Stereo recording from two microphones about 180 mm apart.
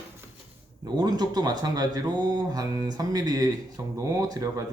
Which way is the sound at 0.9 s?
20° right (ahead or behind).